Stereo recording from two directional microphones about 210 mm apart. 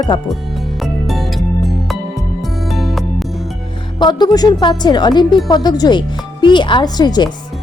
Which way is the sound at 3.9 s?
20° left (ahead or behind).